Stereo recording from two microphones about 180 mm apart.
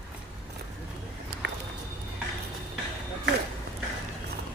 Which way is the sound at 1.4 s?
75° right (ahead or behind).